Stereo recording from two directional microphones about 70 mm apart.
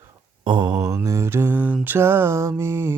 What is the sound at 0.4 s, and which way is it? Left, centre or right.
Mantra, right.